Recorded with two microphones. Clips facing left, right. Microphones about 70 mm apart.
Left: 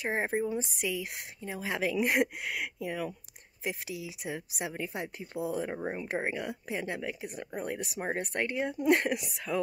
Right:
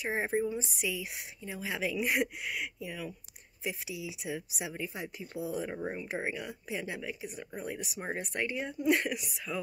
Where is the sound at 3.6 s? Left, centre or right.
Left.